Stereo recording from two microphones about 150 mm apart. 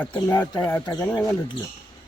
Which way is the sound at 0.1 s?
25° left (ahead or behind).